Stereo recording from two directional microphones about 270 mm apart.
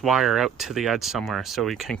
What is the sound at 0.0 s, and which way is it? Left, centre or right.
Speech, centre.